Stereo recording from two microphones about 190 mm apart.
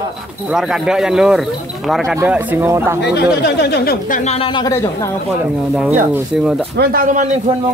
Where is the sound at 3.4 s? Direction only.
60° left (ahead or behind).